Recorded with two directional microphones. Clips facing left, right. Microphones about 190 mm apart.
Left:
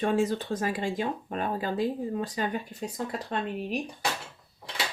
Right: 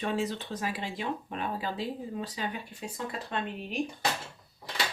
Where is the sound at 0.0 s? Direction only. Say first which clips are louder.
Left 5 dB; 45° left (ahead or behind).